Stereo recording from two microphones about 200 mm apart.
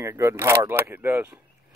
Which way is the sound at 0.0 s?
15° right (ahead or behind).